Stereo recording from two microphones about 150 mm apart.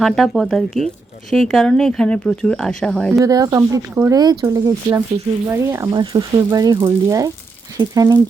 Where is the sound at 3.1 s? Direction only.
25° right (ahead or behind).